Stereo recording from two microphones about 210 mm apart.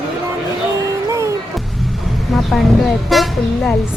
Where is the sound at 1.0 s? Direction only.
15° right (ahead or behind).